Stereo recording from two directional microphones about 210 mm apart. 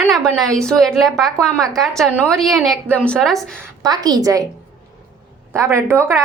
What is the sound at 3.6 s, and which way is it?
Speech, 15° right (ahead or behind).